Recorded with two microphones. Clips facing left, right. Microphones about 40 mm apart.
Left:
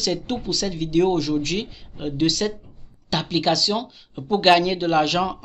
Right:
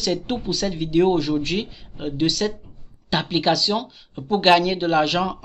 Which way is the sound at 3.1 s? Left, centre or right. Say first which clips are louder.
Right 1 dB; centre.